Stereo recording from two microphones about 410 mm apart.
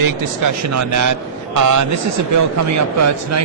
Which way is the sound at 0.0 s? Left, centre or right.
Right.